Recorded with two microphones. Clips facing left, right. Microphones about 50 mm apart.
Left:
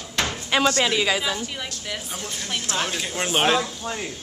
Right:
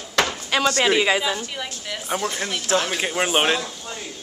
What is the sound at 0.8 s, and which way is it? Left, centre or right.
Speech, centre.